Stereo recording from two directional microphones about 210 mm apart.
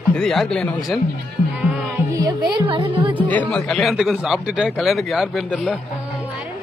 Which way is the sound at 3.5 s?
Centre (ahead or behind).